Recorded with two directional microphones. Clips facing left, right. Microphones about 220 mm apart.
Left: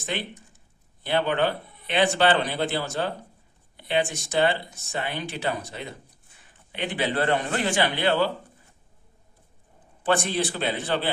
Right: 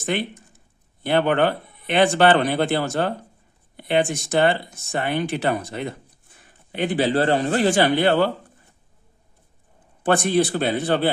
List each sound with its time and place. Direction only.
0.0 s speech: 55° right (ahead or behind)
6.7 s a man's voice: 40° right (ahead or behind)
10.0 s speech: 50° right (ahead or behind)